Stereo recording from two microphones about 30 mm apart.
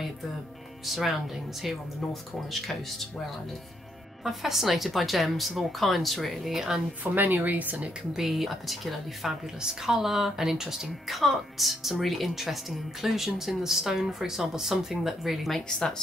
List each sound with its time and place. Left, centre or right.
0.8 s speech: centre
4.2 s speech: centre
6.5 s speech: centre
7.0 s speech: right
8.1 s speech: centre
9.6 s speech: centre
11.1 s speech: centre